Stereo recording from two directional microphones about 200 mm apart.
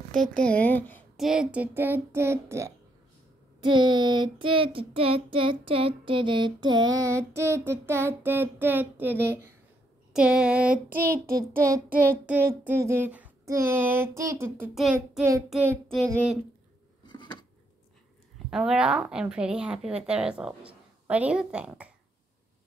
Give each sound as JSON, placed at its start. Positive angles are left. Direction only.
{"t": 0.1, "sound": "a woman's voice", "side_deg": 5}
{"t": 1.2, "sound": "child singing", "side_deg": -5}
{"t": 10.1, "sound": "a woman's voice", "side_deg": -5}
{"t": 10.9, "sound": "a child's voice", "side_deg": -45}
{"t": 11.2, "sound": "child singing", "side_deg": -15}
{"t": 14.7, "sound": "a woman's voice", "side_deg": 0}
{"t": 15.5, "sound": "child singing", "side_deg": -10}
{"t": 17.0, "sound": "a sound", "side_deg": 25}
{"t": 18.5, "sound": "a woman's voice", "side_deg": -5}